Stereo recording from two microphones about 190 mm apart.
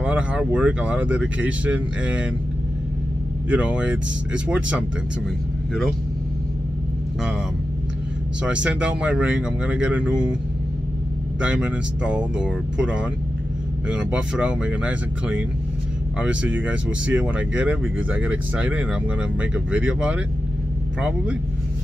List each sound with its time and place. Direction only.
0.0 s speech: 5° right (ahead or behind)
3.4 s speech: 5° right (ahead or behind)
8.5 s speech: 5° right (ahead or behind)
11.4 s speech: 5° right (ahead or behind)